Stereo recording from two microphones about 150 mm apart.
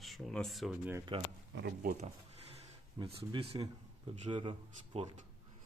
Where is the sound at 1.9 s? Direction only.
45° right (ahead or behind).